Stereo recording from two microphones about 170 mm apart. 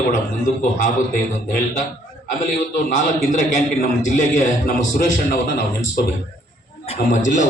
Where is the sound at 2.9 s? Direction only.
50° left (ahead or behind).